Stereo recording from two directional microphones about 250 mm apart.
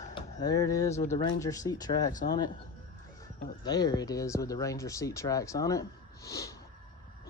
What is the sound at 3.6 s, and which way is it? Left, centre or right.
Speech, centre.